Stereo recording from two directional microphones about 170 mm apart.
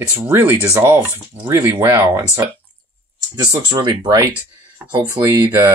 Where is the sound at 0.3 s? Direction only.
15° right (ahead or behind).